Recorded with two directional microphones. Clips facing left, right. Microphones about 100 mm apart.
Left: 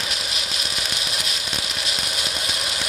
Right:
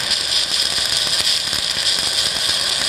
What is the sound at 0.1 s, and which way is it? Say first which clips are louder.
Vehicle: right 1 dB; centre (ahead or behind).